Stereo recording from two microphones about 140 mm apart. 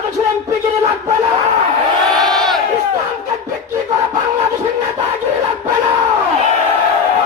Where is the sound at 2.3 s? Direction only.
Centre (ahead or behind).